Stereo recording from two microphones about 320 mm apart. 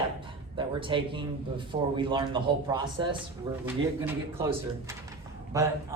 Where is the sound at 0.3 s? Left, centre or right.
Centre.